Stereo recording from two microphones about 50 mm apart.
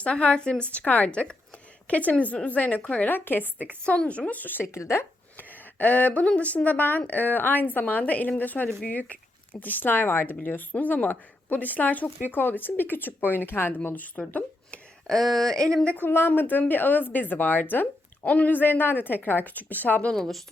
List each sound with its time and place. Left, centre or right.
0.0 s speech: left
3.8 s speech: left
4.3 s speech: left
4.6 s speech: left
5.4 s speech: left
10.3 s speech: left
15.0 s speech: centre
15.5 s speech: centre
16.0 s speech: left
20.1 s speech: centre